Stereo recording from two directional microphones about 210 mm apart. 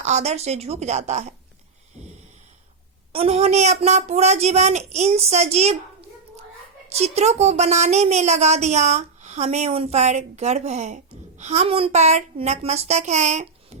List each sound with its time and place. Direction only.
0.0 s a woman's voice: 30° right (ahead or behind)
3.1 s a woman's voice: 30° right (ahead or behind)